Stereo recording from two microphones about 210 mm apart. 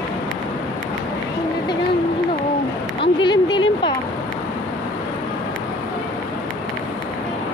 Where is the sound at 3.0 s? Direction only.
20° left (ahead or behind).